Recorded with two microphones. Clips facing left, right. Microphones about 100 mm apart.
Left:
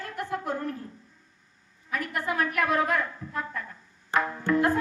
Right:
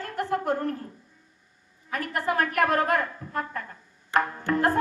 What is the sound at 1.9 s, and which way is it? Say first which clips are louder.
A woman's voice: right 2 dB; 45° right (ahead or behind).